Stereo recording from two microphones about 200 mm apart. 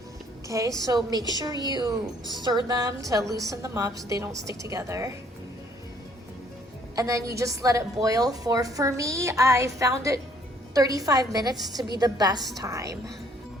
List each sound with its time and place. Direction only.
0.4 s a woman's voice: 15° right (ahead or behind)
6.9 s a woman's voice: 15° right (ahead or behind)
11.5 s a woman's voice: centre (ahead or behind)
11.9 s a woman's voice: 20° right (ahead or behind)